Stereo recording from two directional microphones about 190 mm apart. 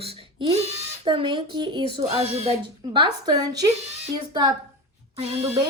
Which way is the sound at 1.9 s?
35° right (ahead or behind).